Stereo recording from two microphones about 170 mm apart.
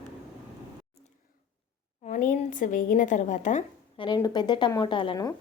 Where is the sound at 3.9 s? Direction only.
25° left (ahead or behind).